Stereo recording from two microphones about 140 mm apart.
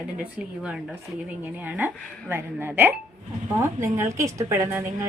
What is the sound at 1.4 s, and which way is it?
A woman's voice, 15° right (ahead or behind).